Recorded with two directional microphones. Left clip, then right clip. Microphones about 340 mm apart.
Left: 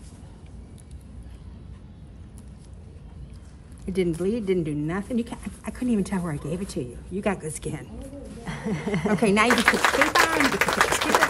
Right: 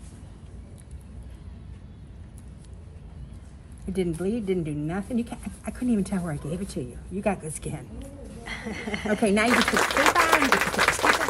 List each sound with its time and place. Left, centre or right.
3.8 s speech: centre
9.1 s speech: centre